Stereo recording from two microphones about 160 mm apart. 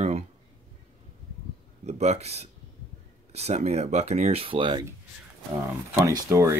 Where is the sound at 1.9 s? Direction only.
45° right (ahead or behind).